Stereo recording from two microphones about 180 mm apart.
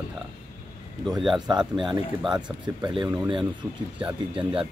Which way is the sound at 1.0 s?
Centre (ahead or behind).